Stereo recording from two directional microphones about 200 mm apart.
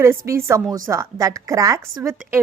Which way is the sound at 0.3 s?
15° right (ahead or behind).